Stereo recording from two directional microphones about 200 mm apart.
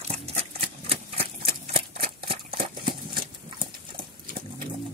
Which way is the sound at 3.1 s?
25° right (ahead or behind).